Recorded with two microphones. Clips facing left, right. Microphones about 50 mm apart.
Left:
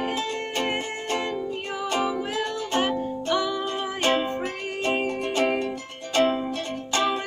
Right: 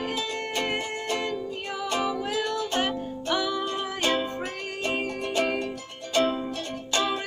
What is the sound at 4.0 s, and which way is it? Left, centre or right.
Music, left.